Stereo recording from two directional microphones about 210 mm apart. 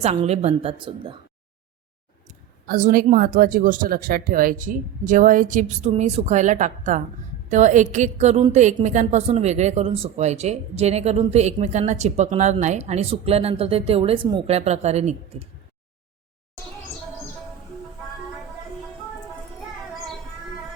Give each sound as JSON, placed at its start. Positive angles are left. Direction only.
{"t": 0.0, "sound": "a woman's voice", "side_deg": -30}
{"t": 2.2, "sound": "speech", "side_deg": -40}